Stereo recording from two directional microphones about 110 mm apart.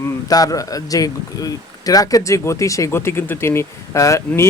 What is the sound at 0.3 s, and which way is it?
Speech, 35° left (ahead or behind).